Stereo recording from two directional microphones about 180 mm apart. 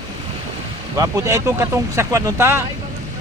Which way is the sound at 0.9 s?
20° right (ahead or behind).